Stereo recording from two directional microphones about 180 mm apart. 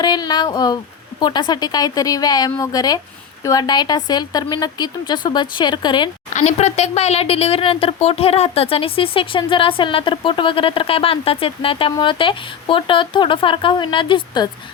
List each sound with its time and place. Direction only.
0.0 s speech: 25° left (ahead or behind)
6.3 s speech: 40° left (ahead or behind)